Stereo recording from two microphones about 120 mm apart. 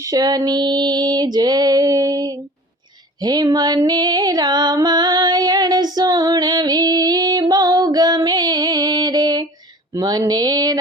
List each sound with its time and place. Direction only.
0.0 s female singing: 30° right (ahead or behind)
3.2 s music: 35° right (ahead or behind)
9.9 s female singing: 35° right (ahead or behind)